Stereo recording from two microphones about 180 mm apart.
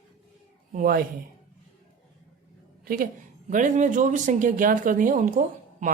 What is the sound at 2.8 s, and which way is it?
A woman's voice, 50° right (ahead or behind).